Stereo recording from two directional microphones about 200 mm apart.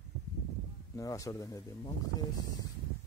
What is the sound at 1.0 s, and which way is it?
Speech, 15° left (ahead or behind).